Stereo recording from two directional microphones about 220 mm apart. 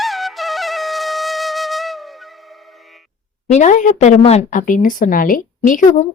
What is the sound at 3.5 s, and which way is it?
A woman's voice, 35° left (ahead or behind).